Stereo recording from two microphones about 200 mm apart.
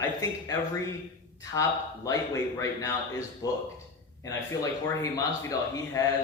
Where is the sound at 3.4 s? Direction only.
15° left (ahead or behind).